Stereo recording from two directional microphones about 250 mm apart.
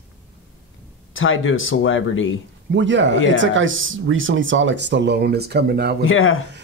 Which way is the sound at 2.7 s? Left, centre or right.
Right.